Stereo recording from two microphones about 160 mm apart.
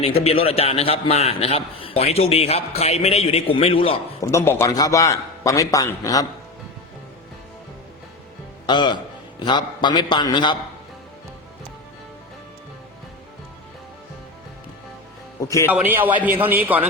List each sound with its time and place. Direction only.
0.0 s a man's voice: 35° left (ahead or behind)
4.2 s a man's voice: 15° left (ahead or behind)
8.6 s a man's voice: 30° left (ahead or behind)
15.4 s a man's voice: 20° left (ahead or behind)
15.7 s a man's voice: 10° right (ahead or behind)